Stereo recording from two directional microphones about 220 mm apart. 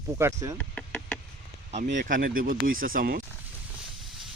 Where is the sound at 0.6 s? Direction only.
5° left (ahead or behind).